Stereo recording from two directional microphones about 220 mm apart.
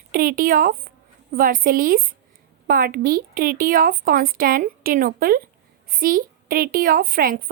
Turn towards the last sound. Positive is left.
turn(degrees=-40)  # may be behind; listen again after turning